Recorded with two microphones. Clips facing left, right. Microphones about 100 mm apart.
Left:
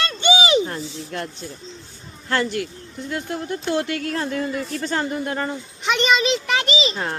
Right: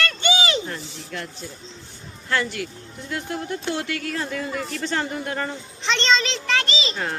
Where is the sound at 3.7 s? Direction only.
40° left (ahead or behind).